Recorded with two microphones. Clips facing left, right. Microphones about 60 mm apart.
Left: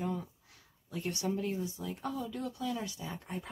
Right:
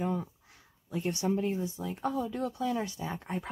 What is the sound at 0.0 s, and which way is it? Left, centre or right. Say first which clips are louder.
Speech: right 4 dB; right.